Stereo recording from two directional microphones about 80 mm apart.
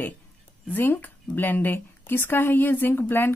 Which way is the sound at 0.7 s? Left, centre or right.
Left.